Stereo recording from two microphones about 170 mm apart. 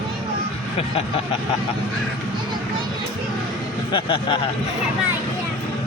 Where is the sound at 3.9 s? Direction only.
30° left (ahead or behind).